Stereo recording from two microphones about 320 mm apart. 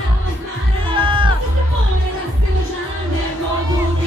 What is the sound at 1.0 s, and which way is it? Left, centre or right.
Music, centre.